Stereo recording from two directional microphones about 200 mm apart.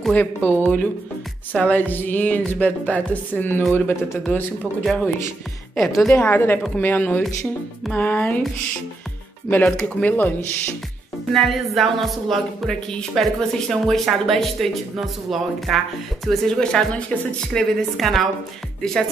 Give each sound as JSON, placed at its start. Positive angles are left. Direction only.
{"t": 0.0, "sound": "speech", "side_deg": 5}
{"t": 9.5, "sound": "speech", "side_deg": 5}